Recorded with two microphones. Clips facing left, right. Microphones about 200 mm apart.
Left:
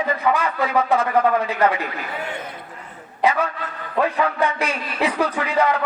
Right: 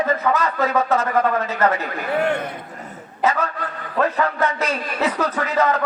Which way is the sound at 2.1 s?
65° right (ahead or behind).